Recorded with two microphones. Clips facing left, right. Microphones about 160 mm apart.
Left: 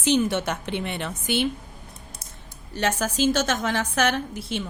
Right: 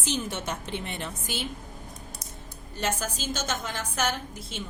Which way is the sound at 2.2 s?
30° left (ahead or behind).